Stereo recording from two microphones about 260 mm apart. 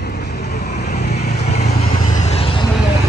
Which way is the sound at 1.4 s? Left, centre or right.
Left.